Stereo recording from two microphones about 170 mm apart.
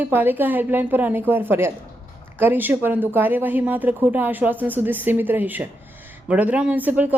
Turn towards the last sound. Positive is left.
turn(degrees=-10)  # may be behind; listen again after turning